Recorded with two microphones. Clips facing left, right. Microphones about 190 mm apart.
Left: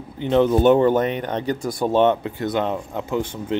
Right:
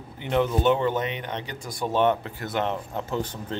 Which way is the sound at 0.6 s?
45° left (ahead or behind).